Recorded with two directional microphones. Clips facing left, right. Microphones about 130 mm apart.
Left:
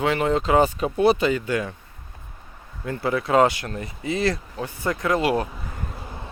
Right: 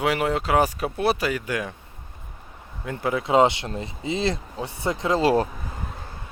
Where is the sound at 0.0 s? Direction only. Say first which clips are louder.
Left 2 dB; 10° right (ahead or behind).